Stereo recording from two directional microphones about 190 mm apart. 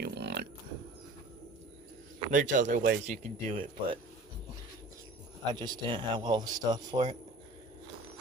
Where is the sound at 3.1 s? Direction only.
30° right (ahead or behind).